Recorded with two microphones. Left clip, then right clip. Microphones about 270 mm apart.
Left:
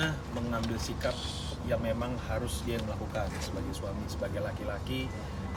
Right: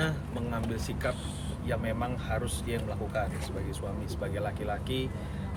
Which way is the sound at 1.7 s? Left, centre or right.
Centre.